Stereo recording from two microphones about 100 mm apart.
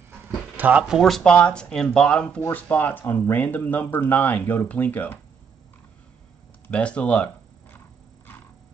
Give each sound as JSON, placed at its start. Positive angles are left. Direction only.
{"t": 0.6, "sound": "speech", "side_deg": -15}
{"t": 0.9, "sound": "speech", "side_deg": 0}
{"t": 6.7, "sound": "speech", "side_deg": 10}